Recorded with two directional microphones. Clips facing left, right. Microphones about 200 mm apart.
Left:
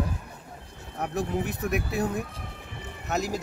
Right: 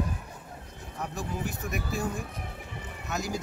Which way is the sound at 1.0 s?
60° left (ahead or behind).